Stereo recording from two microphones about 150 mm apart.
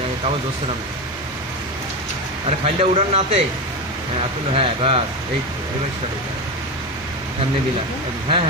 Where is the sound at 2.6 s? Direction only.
40° right (ahead or behind).